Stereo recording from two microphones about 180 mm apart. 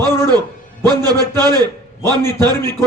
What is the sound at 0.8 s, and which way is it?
A man's voice, 20° right (ahead or behind).